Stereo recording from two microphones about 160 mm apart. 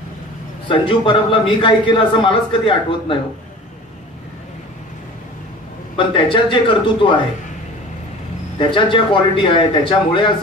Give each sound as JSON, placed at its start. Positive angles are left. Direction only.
{"t": 0.7, "sound": "speech", "side_deg": 30}
{"t": 5.9, "sound": "speech", "side_deg": 30}
{"t": 8.5, "sound": "speech", "side_deg": 30}